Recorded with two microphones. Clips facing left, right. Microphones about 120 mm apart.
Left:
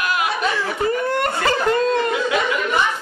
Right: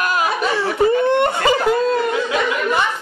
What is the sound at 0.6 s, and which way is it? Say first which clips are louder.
Whimper: right 5 dB; 25° right (ahead or behind).